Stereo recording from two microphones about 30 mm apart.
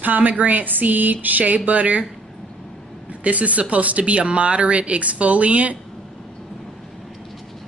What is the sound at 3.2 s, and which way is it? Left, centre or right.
Speech, right.